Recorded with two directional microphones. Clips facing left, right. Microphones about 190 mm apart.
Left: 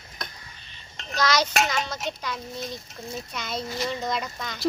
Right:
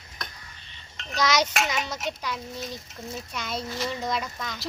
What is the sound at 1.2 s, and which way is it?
A woman's voice, 20° right (ahead or behind).